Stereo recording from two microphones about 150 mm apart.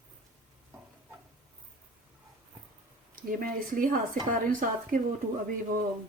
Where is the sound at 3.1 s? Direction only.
65° right (ahead or behind).